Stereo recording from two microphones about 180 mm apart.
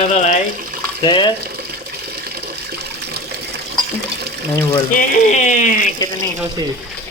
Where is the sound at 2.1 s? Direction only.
60° right (ahead or behind).